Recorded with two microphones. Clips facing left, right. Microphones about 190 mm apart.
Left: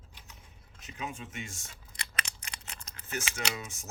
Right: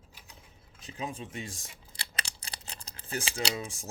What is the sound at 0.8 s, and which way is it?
Speech, 35° right (ahead or behind).